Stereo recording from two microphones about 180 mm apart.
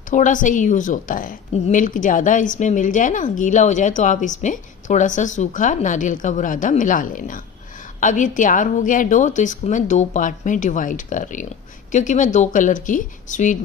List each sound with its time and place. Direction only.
0.1 s a woman's voice: 45° left (ahead or behind)